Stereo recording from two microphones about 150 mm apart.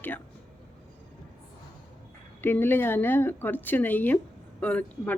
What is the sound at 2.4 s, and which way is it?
Speech, 15° left (ahead or behind).